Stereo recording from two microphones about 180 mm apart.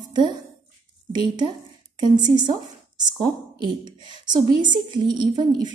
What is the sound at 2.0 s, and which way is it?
A woman's voice, 25° right (ahead or behind).